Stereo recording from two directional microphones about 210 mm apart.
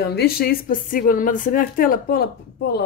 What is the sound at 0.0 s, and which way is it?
Speech, 50° left (ahead or behind).